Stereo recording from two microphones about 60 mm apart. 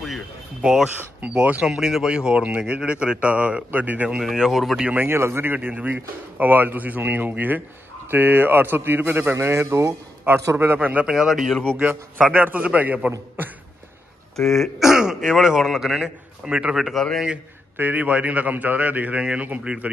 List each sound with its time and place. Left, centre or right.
0.6 s speech: centre
1.3 s a man's voice: right
1.7 s speech: centre; by 4.1 s right
4.1 s speech: centre
5.0 s speech: right
10.8 s a man's voice: right
11.1 s speech: centre
11.6 s a man's voice: right
14.3 s speech: centre
14.8 s speech: centre
16.4 s speech: centre
16.7 s speech: centre
17.7 s a man's voice: right